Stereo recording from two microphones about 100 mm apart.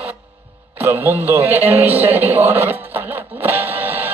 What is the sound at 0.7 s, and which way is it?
A man's voice, 20° right (ahead or behind).